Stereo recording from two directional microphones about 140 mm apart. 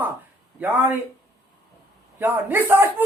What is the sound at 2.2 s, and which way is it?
Speech, 15° right (ahead or behind).